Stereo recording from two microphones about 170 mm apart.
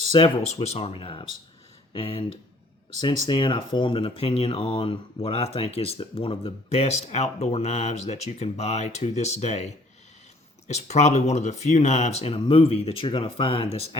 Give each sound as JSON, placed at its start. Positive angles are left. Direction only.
{"t": 0.1, "sound": "speech", "side_deg": 35}